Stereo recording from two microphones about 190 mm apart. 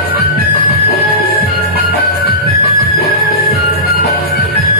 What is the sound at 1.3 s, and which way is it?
Music, 50° left (ahead or behind).